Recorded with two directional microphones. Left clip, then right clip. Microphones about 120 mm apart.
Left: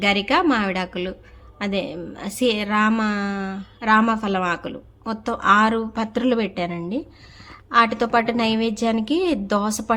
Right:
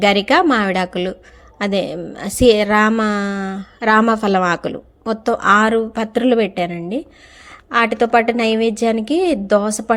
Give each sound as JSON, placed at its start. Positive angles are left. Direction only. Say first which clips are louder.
{"t": 0.0, "sound": "a woman's voice", "louder": "right 6 dB", "side_deg": -45}